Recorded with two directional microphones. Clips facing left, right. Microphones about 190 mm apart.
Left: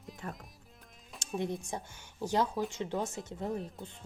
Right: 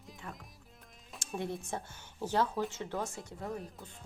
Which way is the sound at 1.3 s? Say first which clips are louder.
Left 2 dB; 15° left (ahead or behind).